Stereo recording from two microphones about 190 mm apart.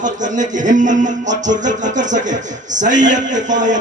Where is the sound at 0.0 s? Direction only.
40° right (ahead or behind).